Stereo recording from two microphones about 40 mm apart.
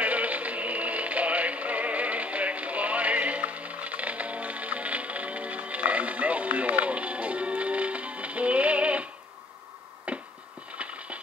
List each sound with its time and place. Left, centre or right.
0.0 s music: right
10.1 s hands: right
10.8 s a sound: right